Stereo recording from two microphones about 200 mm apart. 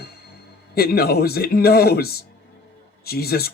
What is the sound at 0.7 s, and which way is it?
Speech, 50° left (ahead or behind).